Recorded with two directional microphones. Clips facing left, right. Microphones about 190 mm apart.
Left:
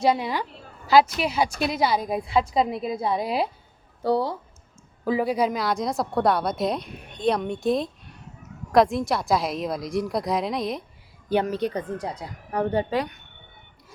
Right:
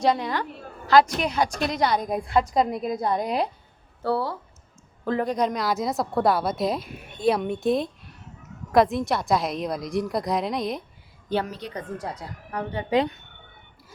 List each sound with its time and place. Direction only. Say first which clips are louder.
0.0 s a woman's voice: left 1 dB; 10° left (ahead or behind)
4.0 s a woman's voice: left 2 dB; 15° left (ahead or behind); by 10.8 s centre (ahead or behind)
11.6 s speech: left 10 dB; 55° left (ahead or behind)
11.9 s a woman's voice: left 2 dB; 15° left (ahead or behind)
12.5 s a woman's voice: left 7 dB; 35° left (ahead or behind)
12.9 s speech: right 4 dB; 25° right (ahead or behind)